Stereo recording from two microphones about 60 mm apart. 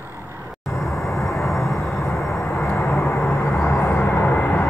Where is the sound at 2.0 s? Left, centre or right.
Left.